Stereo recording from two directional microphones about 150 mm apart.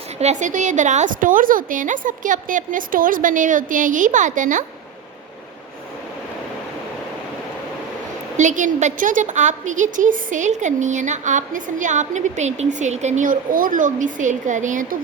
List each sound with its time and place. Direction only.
0.2 s a woman's voice: 50° right (ahead or behind)
8.4 s a woman's voice: 55° right (ahead or behind)